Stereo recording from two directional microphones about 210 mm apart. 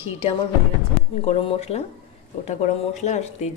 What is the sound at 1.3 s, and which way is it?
Speech, 30° left (ahead or behind).